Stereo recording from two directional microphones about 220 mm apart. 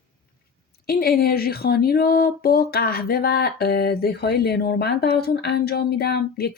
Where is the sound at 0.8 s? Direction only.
45° left (ahead or behind).